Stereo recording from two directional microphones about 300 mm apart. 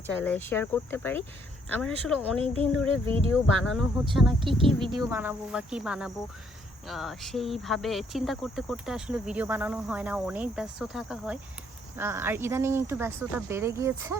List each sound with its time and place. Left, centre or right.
0.2 s speech: centre
2.4 s speech: centre
3.3 s speech: centre
4.4 s speech: centre